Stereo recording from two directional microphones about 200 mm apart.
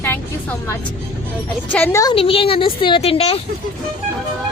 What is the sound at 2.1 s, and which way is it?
A woman's voice, 25° left (ahead or behind).